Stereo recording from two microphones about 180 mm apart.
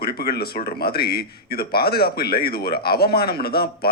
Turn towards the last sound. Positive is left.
turn(degrees=60)  # may be behind; listen again after turning